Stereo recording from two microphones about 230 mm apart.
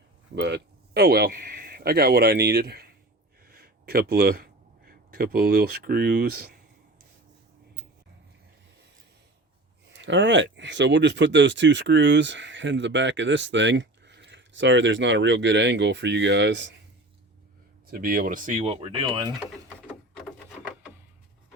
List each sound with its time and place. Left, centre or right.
0.3 s speech: right
3.4 s a sound: right
9.9 s speech: right
17.9 s speech: right